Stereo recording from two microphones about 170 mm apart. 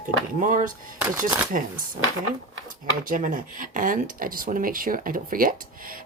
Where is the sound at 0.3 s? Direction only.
50° right (ahead or behind).